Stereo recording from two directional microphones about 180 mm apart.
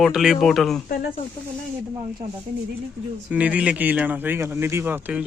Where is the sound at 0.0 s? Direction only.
Centre (ahead or behind).